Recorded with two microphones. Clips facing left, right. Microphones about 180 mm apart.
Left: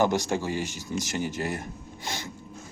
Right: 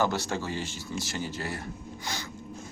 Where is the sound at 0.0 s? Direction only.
15° left (ahead or behind).